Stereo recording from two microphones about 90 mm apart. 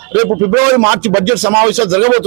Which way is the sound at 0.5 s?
10° right (ahead or behind).